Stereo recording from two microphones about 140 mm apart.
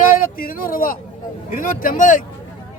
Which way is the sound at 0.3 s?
90° left.